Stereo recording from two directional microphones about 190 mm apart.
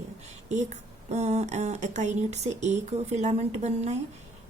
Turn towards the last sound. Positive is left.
turn(degrees=-35)  # may be behind; listen again after turning